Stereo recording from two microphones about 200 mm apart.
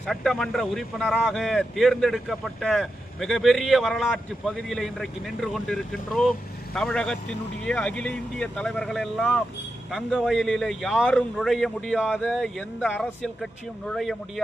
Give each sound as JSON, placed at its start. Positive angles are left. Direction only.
{"t": 0.0, "sound": "speech", "side_deg": 5}